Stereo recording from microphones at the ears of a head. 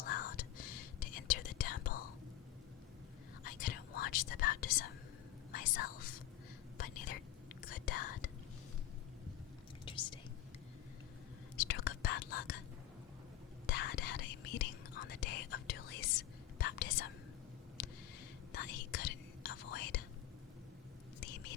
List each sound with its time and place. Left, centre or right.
0.0 s whispering: left
3.4 s whispering: left
9.8 s whispering: left
11.5 s whispering: left
13.7 s whispering: left
18.5 s whispering: left
21.2 s whispering: left